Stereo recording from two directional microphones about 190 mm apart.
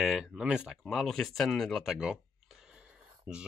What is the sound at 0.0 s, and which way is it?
Speech, centre (ahead or behind).